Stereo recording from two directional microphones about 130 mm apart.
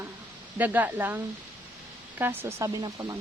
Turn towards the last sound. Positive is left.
turn(degrees=-25)  # may be behind; listen again after turning